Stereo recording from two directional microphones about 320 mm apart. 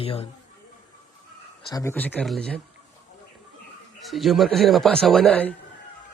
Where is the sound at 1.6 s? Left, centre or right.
Centre.